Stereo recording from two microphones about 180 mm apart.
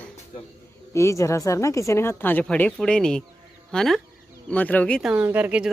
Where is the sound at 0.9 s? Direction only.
15° left (ahead or behind).